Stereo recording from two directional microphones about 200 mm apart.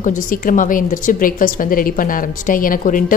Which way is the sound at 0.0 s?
40° left (ahead or behind).